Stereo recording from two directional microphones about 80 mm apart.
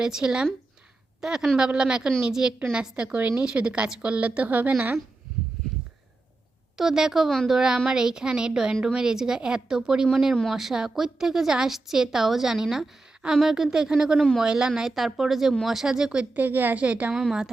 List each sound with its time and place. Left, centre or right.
0.0 s a woman's voice: centre
6.7 s a woman's voice: centre
14.2 s a woman's voice: centre
14.4 s a woman's voice: centre
17.2 s a woman's voice: centre